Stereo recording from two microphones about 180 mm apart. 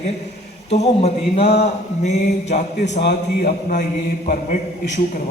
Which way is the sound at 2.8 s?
65° left (ahead or behind).